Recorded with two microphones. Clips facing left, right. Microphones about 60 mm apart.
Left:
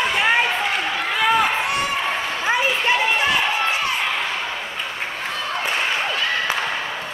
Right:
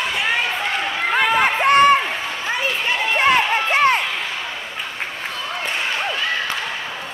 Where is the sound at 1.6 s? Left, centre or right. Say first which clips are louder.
Right 10 dB; right.